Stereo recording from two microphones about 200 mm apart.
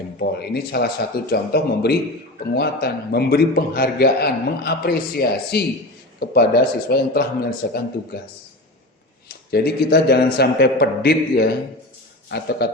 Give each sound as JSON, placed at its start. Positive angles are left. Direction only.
{"t": 0.2, "sound": "a man's voice", "side_deg": 50}
{"t": 9.5, "sound": "a man's voice", "side_deg": 55}